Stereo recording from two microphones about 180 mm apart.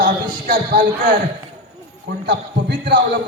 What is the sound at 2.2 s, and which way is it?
Speech, 70° right (ahead or behind).